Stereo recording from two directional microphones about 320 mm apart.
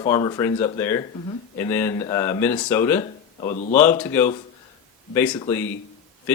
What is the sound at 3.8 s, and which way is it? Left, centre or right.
Speech, centre.